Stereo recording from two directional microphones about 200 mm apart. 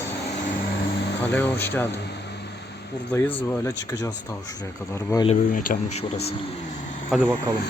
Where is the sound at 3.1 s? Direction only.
10° left (ahead or behind).